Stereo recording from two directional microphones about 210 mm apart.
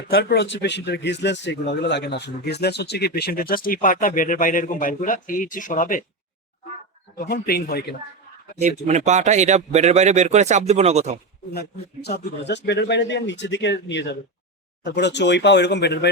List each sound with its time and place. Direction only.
0.1 s speech: 55° left (ahead or behind)
7.3 s speech: 45° left (ahead or behind)
8.9 s speech: 35° right (ahead or behind)
12.0 s speech: 50° left (ahead or behind)